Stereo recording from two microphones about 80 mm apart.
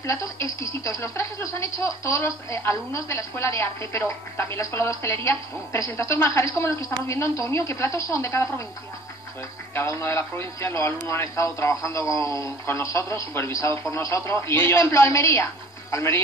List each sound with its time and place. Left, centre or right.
0.0 s speech: left
9.8 s speech: left